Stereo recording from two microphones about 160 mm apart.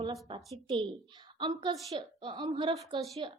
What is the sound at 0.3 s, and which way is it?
A woman's voice, 35° right (ahead or behind).